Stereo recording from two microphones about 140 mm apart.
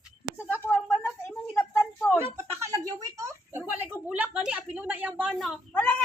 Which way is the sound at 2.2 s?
20° right (ahead or behind).